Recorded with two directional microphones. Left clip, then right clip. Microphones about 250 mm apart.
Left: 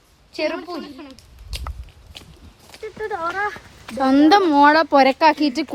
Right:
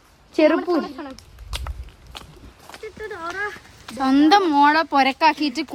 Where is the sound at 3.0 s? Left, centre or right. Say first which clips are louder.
Left 5 dB; centre.